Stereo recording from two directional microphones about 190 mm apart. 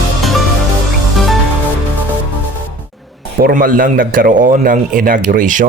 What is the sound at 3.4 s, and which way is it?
A man's voice, 45° right (ahead or behind).